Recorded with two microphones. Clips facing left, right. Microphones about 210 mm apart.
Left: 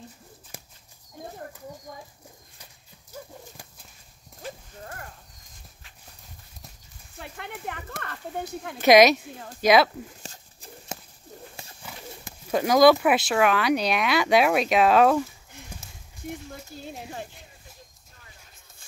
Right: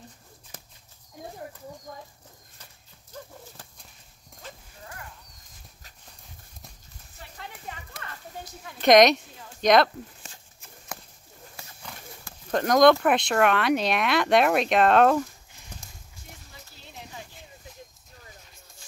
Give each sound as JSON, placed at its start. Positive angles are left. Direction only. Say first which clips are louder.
{"t": 0.5, "sound": "horse", "louder": "left 2 dB", "side_deg": 10}
{"t": 2.6, "sound": "horse", "louder": "left 1 dB", "side_deg": 10}
{"t": 4.8, "sound": "horse", "louder": "left 3 dB", "side_deg": 45}
{"t": 7.2, "sound": "speech", "louder": "left 5 dB", "side_deg": 65}
{"t": 8.8, "sound": "speech", "louder": "left 1 dB", "side_deg": 5}
{"t": 10.2, "sound": "a sound", "louder": "left 5 dB", "side_deg": 35}
{"t": 11.8, "sound": "clip-clop", "louder": "left 1 dB", "side_deg": 5}
{"t": 12.4, "sound": "speech", "louder": "left 1 dB", "side_deg": 5}
{"t": 15.7, "sound": "a sound", "louder": "even", "side_deg": 10}
{"t": 16.8, "sound": "a sound", "louder": "left 5 dB", "side_deg": 50}